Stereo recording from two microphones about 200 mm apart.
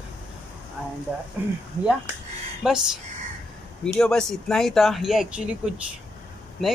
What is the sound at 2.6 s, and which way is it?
Speech, 5° right (ahead or behind).